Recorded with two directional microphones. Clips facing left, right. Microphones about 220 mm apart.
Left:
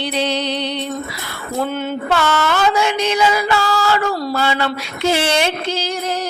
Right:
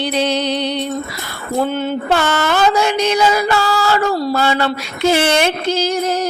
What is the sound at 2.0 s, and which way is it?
Mantra, 45° right (ahead or behind).